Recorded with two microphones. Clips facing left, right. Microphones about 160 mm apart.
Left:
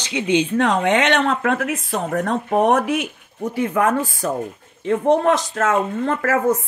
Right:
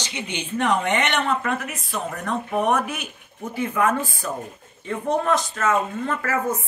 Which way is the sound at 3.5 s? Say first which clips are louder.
Left 3 dB; 60° left (ahead or behind).